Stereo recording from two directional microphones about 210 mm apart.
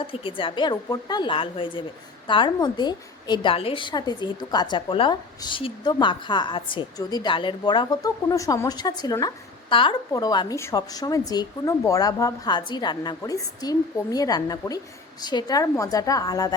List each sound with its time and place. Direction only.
0.0 s a woman's voice: 25° left (ahead or behind)